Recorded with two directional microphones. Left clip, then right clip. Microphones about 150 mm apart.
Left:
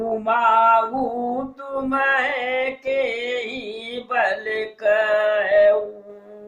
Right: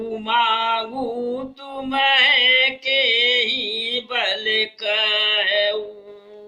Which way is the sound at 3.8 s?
40° right (ahead or behind).